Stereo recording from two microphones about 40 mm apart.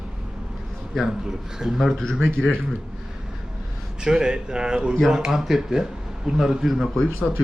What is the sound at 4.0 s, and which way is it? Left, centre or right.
A man's voice, centre.